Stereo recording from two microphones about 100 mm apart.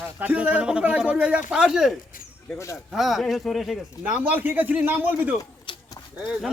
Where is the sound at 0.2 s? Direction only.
15° right (ahead or behind).